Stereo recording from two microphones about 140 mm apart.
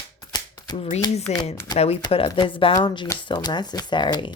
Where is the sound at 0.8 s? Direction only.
50° left (ahead or behind).